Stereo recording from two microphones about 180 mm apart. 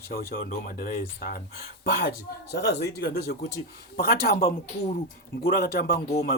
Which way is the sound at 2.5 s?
65° left (ahead or behind).